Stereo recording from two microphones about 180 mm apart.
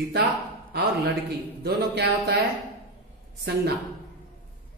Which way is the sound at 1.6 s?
60° right (ahead or behind).